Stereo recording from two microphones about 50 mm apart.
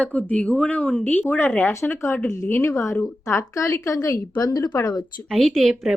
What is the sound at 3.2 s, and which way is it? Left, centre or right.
Speech, left.